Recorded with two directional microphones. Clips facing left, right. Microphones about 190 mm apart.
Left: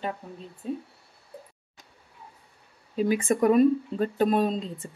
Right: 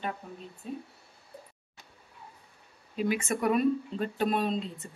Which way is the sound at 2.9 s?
35° left (ahead or behind).